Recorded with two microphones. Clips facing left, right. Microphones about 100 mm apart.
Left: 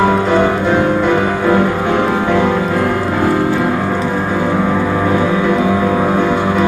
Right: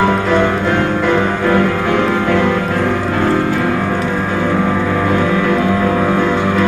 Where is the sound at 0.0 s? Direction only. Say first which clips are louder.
Left 1 dB; 15° left (ahead or behind).